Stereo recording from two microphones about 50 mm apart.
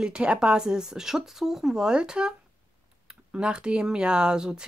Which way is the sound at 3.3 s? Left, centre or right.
Centre.